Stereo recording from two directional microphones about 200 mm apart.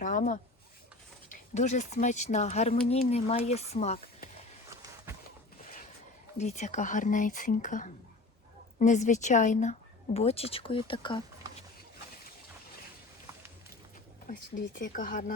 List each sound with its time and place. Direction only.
0.0 s speech: 40° left (ahead or behind)
6.3 s speech: 35° left (ahead or behind)
14.8 s speech: 45° left (ahead or behind)